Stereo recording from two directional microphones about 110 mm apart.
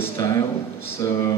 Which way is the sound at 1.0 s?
30° left (ahead or behind).